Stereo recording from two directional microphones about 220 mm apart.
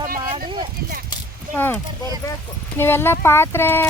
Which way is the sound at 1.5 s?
10° left (ahead or behind).